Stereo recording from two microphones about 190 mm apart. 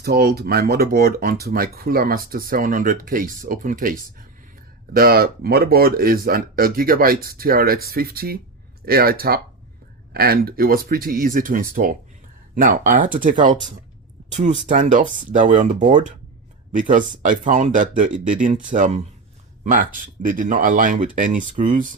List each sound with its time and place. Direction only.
0.0 s speech: 55° right (ahead or behind)